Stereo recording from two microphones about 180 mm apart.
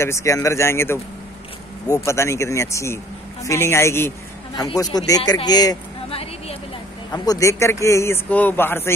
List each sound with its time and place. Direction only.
0.0 s a man's voice: 15° left (ahead or behind)
6.0 s a sound: 35° left (ahead or behind)
7.1 s a man's voice: 20° left (ahead or behind)